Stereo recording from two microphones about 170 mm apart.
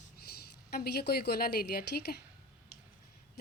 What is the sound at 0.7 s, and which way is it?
A woman's voice, 70° left (ahead or behind).